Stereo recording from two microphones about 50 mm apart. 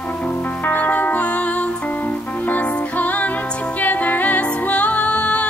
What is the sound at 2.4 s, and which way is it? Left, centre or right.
Music, left.